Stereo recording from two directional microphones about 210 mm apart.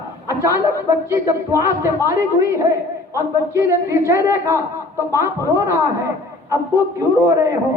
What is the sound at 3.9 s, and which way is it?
A man's voice, 15° right (ahead or behind).